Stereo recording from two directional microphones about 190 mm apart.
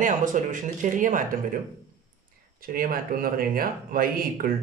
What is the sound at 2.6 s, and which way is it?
A man's voice, 50° right (ahead or behind).